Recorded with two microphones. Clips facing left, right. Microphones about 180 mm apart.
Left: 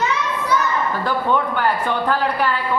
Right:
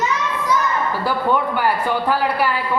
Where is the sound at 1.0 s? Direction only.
10° right (ahead or behind).